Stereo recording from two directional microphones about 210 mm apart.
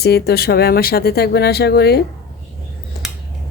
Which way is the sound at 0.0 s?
50° left (ahead or behind).